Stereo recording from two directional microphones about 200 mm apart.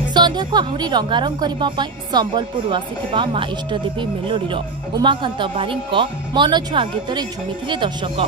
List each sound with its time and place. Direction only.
0.1 s a woman's voice: 20° right (ahead or behind)